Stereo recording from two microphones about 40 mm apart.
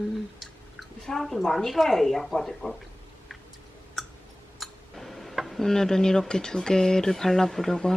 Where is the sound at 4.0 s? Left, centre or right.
Centre.